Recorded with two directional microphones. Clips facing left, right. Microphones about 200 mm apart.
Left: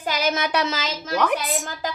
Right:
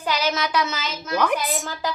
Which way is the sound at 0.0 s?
45° left (ahead or behind).